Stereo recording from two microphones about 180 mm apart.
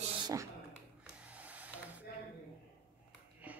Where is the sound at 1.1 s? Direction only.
10° right (ahead or behind).